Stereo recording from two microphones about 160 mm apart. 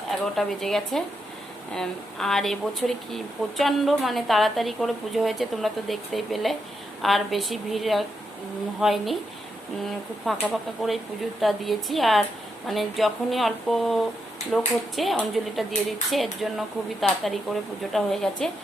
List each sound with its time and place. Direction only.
0.3 s speech: centre (ahead or behind)
10.2 s speech: centre (ahead or behind)